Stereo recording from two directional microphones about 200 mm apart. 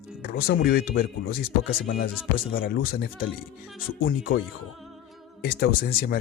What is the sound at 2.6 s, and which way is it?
Speech, 50° left (ahead or behind).